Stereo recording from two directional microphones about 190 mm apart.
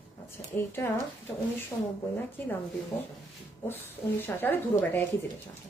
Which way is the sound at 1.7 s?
20° left (ahead or behind).